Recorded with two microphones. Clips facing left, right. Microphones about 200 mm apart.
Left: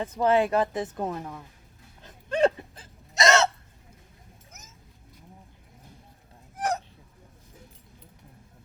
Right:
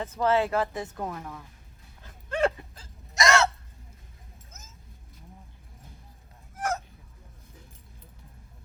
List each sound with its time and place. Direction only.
0.0 s speech: 15° left (ahead or behind)
2.0 s a sound: 20° left (ahead or behind)
6.6 s honk: 15° left (ahead or behind)